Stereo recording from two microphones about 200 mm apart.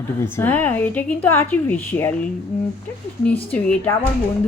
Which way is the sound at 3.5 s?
5° left (ahead or behind).